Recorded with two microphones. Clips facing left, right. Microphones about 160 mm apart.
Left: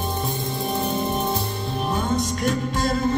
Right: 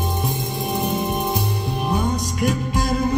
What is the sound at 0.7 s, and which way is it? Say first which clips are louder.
Music: right 2 dB; 15° right (ahead or behind).